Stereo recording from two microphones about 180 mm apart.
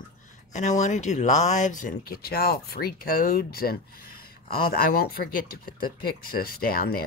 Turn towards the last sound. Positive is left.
turn(degrees=55)  # may be behind; listen again after turning